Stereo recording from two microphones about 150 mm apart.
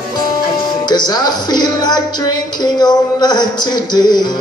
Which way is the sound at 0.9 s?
25° left (ahead or behind).